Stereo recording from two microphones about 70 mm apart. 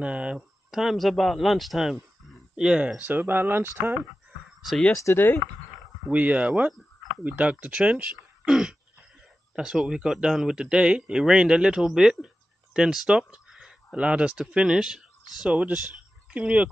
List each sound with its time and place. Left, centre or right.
0.0 s speech: centre
0.4 s speech: centre
3.0 s speech: right
4.9 s speech: left
6.0 s speech: centre
13.3 s a sound: centre
13.9 s speech: centre